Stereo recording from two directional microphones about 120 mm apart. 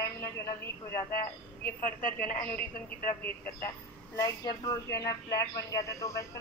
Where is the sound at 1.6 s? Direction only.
15° left (ahead or behind).